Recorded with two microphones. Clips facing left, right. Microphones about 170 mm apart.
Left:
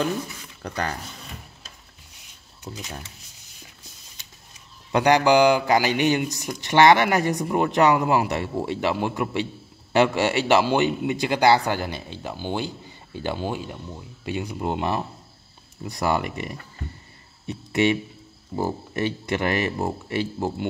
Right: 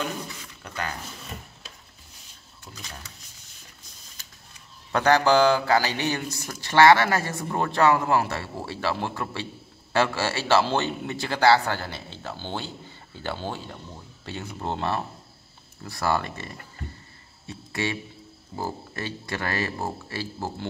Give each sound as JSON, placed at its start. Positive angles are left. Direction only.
{"t": 0.6, "sound": "speech", "side_deg": 40}
{"t": 2.6, "sound": "speech", "side_deg": 20}
{"t": 4.9, "sound": "speech", "side_deg": 15}